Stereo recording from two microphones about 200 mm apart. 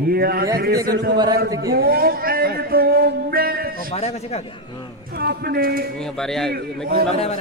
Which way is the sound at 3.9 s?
30° left (ahead or behind).